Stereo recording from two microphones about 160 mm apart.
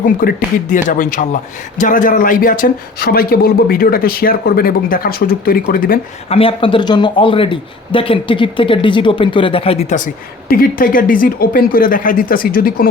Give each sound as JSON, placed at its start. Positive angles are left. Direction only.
{"t": 0.0, "sound": "a man's voice", "side_deg": 60}
{"t": 6.2, "sound": "speech", "side_deg": 35}
{"t": 10.5, "sound": "speech", "side_deg": 65}